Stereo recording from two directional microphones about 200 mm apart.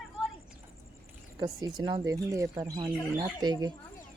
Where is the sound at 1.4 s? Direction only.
20° right (ahead or behind).